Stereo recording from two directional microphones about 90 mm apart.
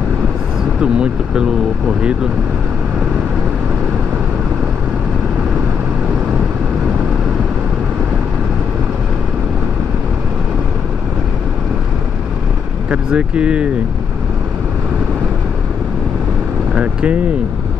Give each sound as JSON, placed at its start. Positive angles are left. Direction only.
{"t": 0.7, "sound": "speech", "side_deg": -10}
{"t": 12.9, "sound": "speech", "side_deg": -10}
{"t": 16.7, "sound": "speech", "side_deg": -15}